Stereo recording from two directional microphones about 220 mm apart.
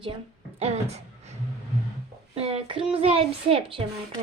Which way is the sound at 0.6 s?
30° right (ahead or behind).